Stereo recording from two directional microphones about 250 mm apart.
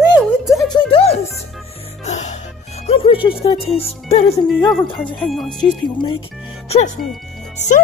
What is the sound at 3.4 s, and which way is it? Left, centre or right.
Music, left.